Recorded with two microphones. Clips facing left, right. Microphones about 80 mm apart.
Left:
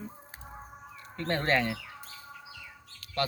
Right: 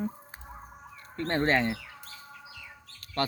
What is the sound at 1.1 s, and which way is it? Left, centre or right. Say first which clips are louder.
Speech: right 2 dB; right.